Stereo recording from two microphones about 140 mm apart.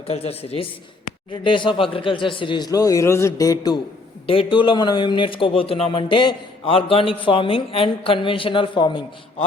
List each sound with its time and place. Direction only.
0.1 s a man's voice: 45° left (ahead or behind); by 3.8 s 25° left (ahead or behind)
4.3 s speech: 40° left (ahead or behind)